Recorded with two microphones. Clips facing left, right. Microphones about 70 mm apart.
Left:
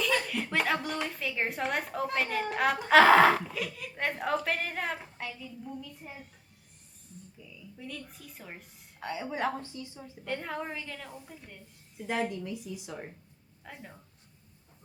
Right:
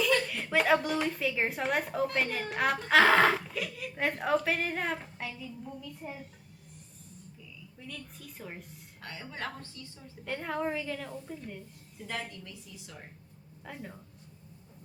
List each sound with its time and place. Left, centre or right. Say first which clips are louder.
0.5 s a woman's voice: right 5 dB; centre
7.8 s a woman's voice: left 2 dB; centre
9.0 s a woman's voice: left 7 dB; centre
10.2 s a woman's voice: right 2 dB; centre
11.9 s a woman's voice: left 7 dB; left
13.7 s a woman's voice: right 3 dB; centre